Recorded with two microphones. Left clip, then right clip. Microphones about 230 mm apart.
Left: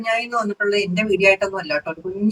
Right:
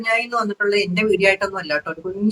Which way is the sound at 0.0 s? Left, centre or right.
Centre.